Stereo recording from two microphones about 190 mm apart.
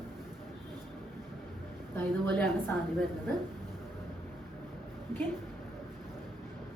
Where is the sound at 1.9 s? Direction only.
10° left (ahead or behind).